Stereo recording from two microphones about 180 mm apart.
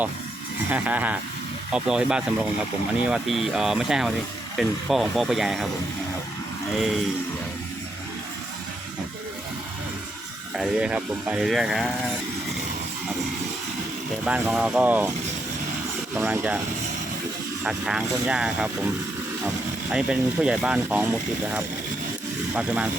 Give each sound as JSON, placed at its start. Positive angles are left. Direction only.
{"t": 0.7, "sound": "speech", "side_deg": -10}
{"t": 6.7, "sound": "speech", "side_deg": 0}
{"t": 10.5, "sound": "speech", "side_deg": -5}
{"t": 14.3, "sound": "speech", "side_deg": -5}
{"t": 16.1, "sound": "speech", "side_deg": -10}
{"t": 17.6, "sound": "speech", "side_deg": -5}
{"t": 19.9, "sound": "speech", "side_deg": -5}